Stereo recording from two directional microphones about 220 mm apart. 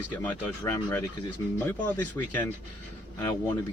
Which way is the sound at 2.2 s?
15° left (ahead or behind).